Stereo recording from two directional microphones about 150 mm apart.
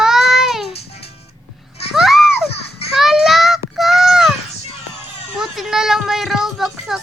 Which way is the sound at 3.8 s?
Centre (ahead or behind).